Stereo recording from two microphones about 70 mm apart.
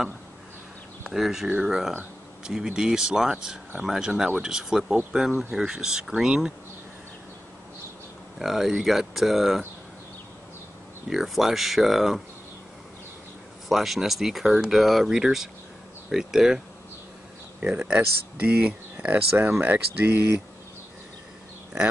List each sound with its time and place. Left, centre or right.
1.0 s speech: centre
8.4 s speech: centre
11.1 s speech: centre
13.7 s speech: centre; by 20.2 s right